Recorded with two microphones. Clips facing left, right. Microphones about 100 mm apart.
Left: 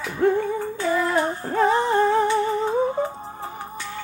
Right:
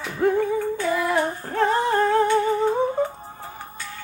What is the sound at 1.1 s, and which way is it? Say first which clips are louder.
Female singing: left 1 dB; 20° left (ahead or behind).